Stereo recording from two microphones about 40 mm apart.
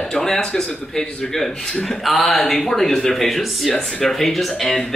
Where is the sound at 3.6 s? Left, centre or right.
Centre.